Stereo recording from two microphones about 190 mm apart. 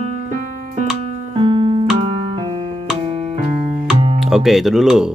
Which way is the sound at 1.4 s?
25° right (ahead or behind).